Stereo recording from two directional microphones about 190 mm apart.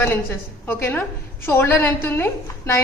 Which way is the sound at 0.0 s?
10° left (ahead or behind).